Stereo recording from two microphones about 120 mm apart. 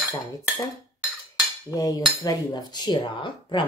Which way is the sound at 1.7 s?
30° left (ahead or behind).